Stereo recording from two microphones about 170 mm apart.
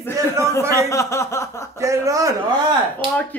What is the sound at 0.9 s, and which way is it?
Speech, 15° left (ahead or behind).